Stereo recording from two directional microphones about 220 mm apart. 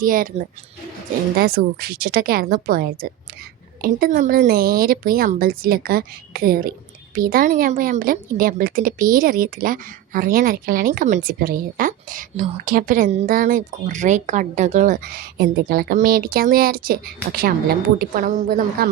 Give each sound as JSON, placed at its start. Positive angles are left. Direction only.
{"t": 0.0, "sound": "a woman's voice", "side_deg": -40}
{"t": 1.4, "sound": "a woman's voice", "side_deg": -45}